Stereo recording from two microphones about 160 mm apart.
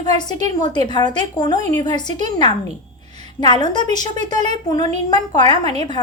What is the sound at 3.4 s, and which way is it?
A woman's voice, 25° left (ahead or behind).